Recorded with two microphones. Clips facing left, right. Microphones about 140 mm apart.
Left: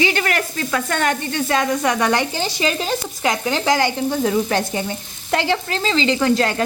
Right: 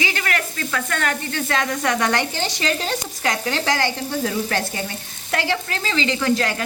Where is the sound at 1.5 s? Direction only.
15° left (ahead or behind).